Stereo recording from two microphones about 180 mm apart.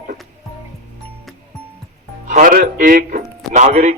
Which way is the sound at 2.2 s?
45° right (ahead or behind).